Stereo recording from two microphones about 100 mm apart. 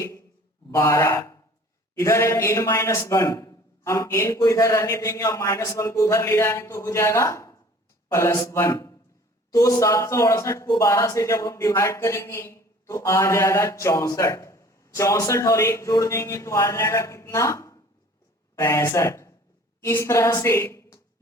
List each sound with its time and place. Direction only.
0.7 s speech: 30° left (ahead or behind)
2.0 s a man's voice: 30° left (ahead or behind)